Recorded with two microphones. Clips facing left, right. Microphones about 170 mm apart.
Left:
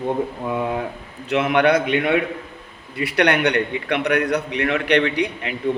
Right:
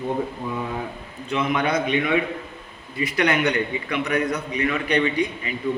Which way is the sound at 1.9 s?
65° left (ahead or behind).